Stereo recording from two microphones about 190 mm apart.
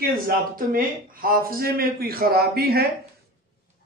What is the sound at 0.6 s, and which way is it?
A man's voice, 50° right (ahead or behind).